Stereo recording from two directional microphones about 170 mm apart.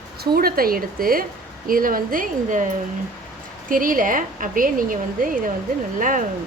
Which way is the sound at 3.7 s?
55° right (ahead or behind).